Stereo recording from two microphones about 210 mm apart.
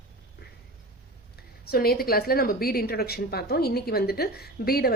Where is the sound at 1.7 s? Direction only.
45° left (ahead or behind).